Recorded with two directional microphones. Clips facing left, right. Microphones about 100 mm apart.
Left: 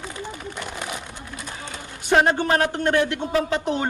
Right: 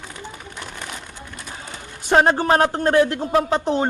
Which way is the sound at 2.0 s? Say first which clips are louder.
Right 3 dB; 40° right (ahead or behind).